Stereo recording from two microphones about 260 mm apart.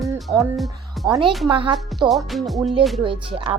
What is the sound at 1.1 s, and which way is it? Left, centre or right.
Speech, centre.